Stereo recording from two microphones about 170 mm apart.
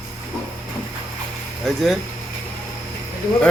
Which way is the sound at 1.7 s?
Centre (ahead or behind).